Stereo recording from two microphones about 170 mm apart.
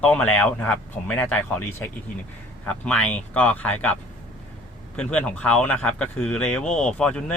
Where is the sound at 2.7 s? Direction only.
5° left (ahead or behind).